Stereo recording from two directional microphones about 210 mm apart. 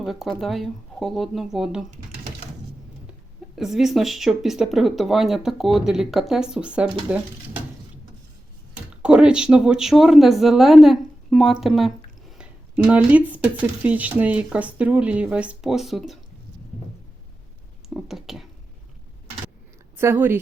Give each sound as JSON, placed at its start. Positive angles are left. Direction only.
{"t": 0.0, "sound": "speech", "side_deg": 0}
{"t": 3.1, "sound": "speech", "side_deg": 0}
{"t": 9.0, "sound": "speech", "side_deg": -5}
{"t": 12.9, "sound": "speech", "side_deg": -5}
{"t": 17.8, "sound": "a sound", "side_deg": 0}
{"t": 20.0, "sound": "speech", "side_deg": -10}